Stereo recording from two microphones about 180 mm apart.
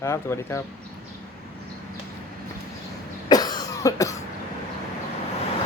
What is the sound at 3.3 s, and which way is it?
Cough, 20° left (ahead or behind).